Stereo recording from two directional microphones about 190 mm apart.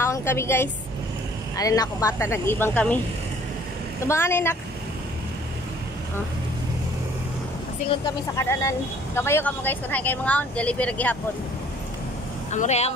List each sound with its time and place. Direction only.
0.0 s a woman's voice: 15° left (ahead or behind)
4.0 s speech: 15° left (ahead or behind)
8.4 s speech: 15° left (ahead or behind)
12.4 s speech: 40° left (ahead or behind)